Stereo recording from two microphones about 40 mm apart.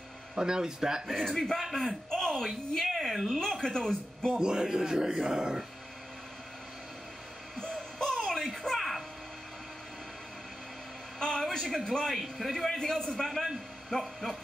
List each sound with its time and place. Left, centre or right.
0.4 s speech: centre
1.0 s speech: centre
1.9 s a man's voice: centre
3.6 s a man's voice: centre
4.4 s speech: centre
7.7 s music: centre
8.6 s a sound: centre
11.1 s a sound: centre
11.7 s a man's voice: centre
12.2 s speech: centre
12.6 s a man's voice: centre